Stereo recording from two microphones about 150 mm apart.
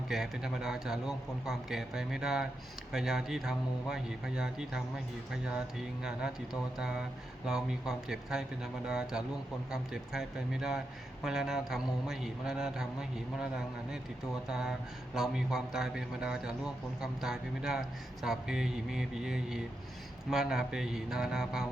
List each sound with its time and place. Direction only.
0.1 s speech: centre (ahead or behind)